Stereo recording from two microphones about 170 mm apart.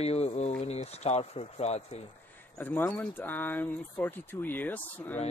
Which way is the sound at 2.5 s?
10° left (ahead or behind).